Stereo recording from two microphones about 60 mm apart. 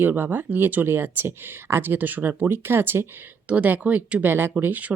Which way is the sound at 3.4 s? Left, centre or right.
Right.